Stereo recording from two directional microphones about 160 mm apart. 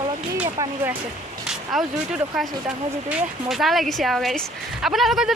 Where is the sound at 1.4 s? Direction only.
5° right (ahead or behind).